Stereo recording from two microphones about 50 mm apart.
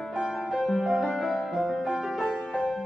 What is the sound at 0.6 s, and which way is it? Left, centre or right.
Music, centre.